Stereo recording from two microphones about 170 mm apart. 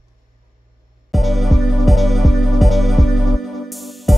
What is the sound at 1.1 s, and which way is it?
Music, centre (ahead or behind).